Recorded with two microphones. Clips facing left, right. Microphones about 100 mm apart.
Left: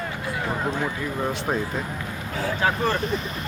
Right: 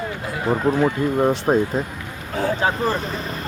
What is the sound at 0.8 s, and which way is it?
Speech, 25° right (ahead or behind).